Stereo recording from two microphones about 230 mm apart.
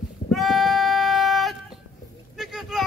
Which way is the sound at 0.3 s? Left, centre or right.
Centre.